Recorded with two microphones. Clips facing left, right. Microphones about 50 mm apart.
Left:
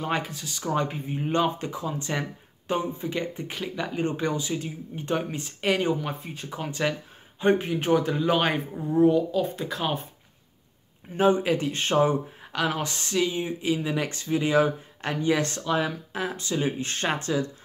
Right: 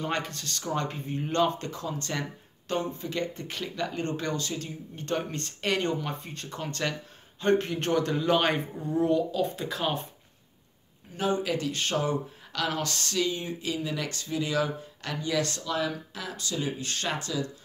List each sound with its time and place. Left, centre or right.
0.0 s speech: centre
11.1 s speech: left